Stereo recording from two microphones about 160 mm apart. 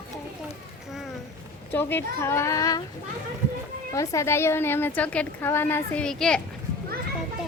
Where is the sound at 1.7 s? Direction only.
15° left (ahead or behind).